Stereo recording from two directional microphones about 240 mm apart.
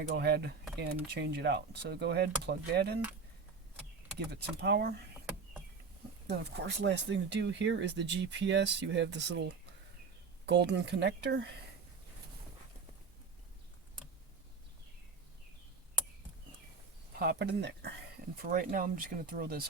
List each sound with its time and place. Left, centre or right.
0.1 s speech: right
4.3 s speech: right
6.2 s speech: right
17.2 s speech: right